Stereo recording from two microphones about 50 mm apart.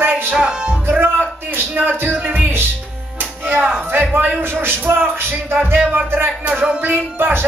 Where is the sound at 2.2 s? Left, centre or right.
Right.